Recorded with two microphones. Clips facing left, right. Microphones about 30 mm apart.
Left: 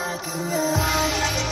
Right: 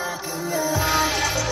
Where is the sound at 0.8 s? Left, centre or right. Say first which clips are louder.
Right 1 dB; right.